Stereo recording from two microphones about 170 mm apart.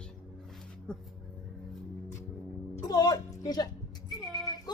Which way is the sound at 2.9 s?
25° left (ahead or behind).